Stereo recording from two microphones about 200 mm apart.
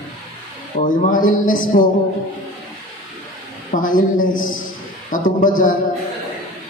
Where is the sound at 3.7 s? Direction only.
40° left (ahead or behind).